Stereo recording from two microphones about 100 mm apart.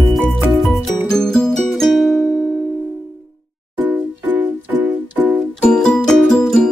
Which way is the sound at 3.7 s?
20° right (ahead or behind).